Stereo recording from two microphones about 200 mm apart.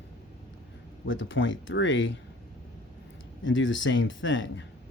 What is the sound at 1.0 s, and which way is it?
Speech, 70° left (ahead or behind).